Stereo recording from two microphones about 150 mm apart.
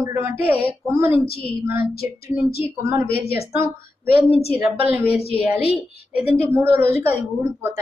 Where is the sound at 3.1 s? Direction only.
90° left.